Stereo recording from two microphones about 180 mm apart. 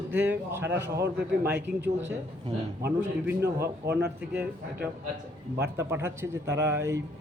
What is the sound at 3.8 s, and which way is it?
Speech, 15° right (ahead or behind).